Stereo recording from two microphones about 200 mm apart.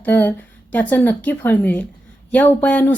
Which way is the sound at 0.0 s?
10° left (ahead or behind).